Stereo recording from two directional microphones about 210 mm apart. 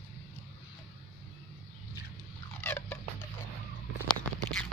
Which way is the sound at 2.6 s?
10° left (ahead or behind).